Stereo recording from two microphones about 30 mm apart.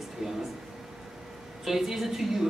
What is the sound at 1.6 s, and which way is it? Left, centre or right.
Speech, centre.